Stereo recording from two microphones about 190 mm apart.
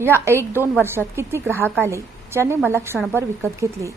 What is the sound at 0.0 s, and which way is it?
A woman's voice, 15° right (ahead or behind).